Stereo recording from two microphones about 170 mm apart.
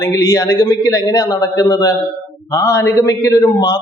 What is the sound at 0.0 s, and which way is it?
A man's voice, 20° left (ahead or behind).